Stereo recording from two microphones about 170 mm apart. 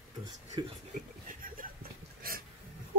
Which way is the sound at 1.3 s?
55° right (ahead or behind).